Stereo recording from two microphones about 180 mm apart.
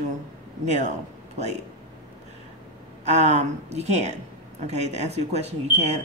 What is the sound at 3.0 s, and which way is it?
Speech, 40° right (ahead or behind).